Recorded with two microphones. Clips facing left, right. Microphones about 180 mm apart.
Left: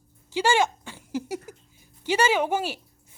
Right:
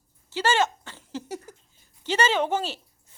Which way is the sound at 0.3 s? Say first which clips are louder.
Left 1 dB; 15° left (ahead or behind).